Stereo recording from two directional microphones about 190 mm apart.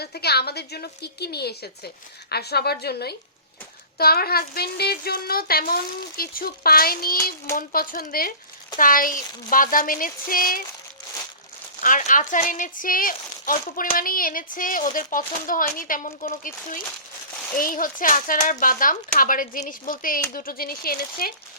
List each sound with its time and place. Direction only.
0.0 s a woman's voice: 60° left (ahead or behind)
11.8 s speech: 45° left (ahead or behind)